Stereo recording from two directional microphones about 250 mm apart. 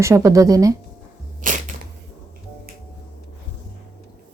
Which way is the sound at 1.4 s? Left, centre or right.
Right.